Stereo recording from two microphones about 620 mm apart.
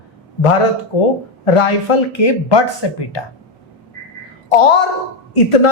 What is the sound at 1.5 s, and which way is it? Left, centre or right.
A woman's voice, left.